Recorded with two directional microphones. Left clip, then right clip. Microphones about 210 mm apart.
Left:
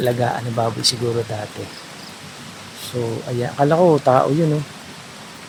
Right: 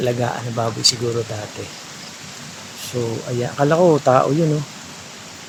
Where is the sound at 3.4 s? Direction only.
5° right (ahead or behind).